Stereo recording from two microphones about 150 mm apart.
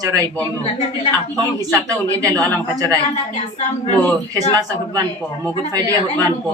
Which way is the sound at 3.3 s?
50° left (ahead or behind).